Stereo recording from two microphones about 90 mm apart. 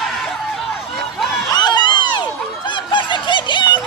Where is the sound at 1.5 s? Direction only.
55° left (ahead or behind).